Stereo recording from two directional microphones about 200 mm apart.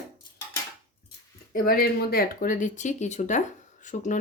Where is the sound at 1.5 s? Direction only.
50° left (ahead or behind).